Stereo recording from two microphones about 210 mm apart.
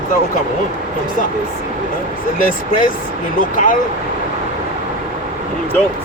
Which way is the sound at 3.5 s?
40° left (ahead or behind).